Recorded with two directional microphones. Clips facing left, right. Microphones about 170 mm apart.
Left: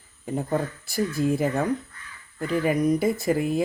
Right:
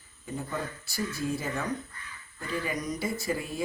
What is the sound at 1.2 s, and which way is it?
Speech, 85° left.